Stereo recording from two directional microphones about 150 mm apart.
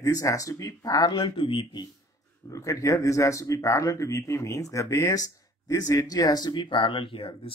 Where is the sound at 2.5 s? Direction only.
20° left (ahead or behind).